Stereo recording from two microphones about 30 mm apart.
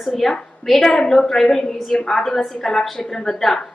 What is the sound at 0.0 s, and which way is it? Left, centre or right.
A woman's voice, centre.